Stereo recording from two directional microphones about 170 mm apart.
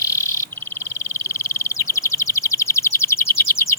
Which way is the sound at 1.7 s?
20° left (ahead or behind).